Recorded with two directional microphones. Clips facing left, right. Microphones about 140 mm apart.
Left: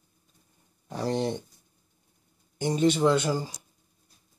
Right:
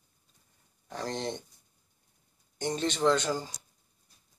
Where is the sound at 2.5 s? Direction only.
10° left (ahead or behind).